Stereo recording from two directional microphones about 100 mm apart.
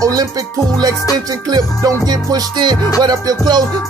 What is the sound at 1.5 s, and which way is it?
Music, 40° right (ahead or behind).